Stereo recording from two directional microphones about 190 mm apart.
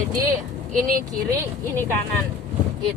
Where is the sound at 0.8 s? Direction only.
45° right (ahead or behind).